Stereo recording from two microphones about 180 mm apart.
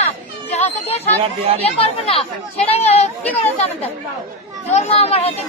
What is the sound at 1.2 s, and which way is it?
Speech, 35° right (ahead or behind).